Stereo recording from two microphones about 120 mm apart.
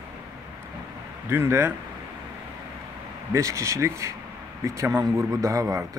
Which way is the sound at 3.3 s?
25° right (ahead or behind).